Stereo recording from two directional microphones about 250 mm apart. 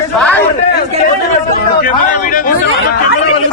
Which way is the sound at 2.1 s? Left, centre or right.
Left.